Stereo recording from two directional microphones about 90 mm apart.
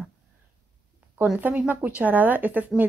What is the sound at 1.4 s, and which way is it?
Speech, 20° right (ahead or behind).